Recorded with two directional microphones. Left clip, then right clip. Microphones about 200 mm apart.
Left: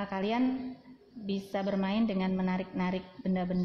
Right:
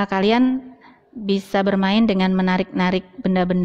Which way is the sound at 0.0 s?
40° right (ahead or behind).